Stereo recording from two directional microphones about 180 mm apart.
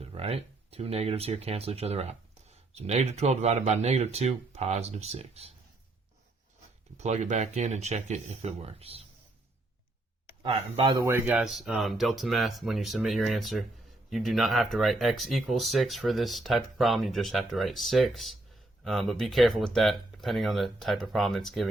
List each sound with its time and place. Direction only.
0.0 s speech: 35° right (ahead or behind)
6.9 s speech: 40° right (ahead or behind)
10.4 s speech: 25° right (ahead or behind)
11.3 s speech: centre (ahead or behind)